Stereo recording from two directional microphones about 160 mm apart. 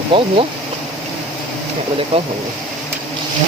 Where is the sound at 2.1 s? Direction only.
35° right (ahead or behind).